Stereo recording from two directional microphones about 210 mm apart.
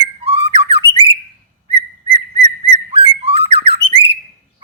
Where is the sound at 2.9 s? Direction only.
25° right (ahead or behind).